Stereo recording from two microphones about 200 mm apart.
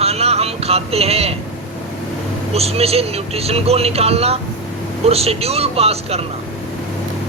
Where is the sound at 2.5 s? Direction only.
30° right (ahead or behind).